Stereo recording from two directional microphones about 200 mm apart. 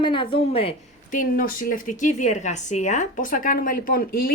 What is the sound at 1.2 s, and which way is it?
Speech, 45° left (ahead or behind).